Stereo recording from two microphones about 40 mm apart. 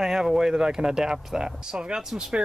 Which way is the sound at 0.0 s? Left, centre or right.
Centre.